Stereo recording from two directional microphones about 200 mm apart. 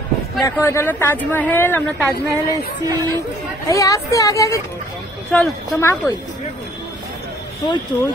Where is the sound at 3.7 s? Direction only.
15° left (ahead or behind).